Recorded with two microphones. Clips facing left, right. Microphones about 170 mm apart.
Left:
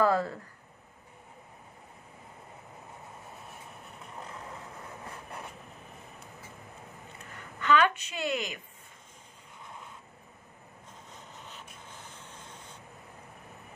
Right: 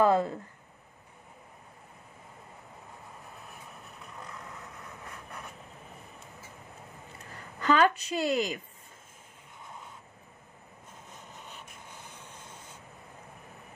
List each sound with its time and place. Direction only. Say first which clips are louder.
0.0 s speech: right 2 dB; 20° right (ahead or behind)
4.2 s vehicle: left 2 dB; 30° left (ahead or behind)
7.3 s a woman's voice: right 1 dB; 35° right (ahead or behind)
11.8 s vehicle: even; 10° right (ahead or behind)